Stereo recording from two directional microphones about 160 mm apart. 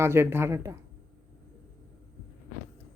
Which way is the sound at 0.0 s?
15° right (ahead or behind).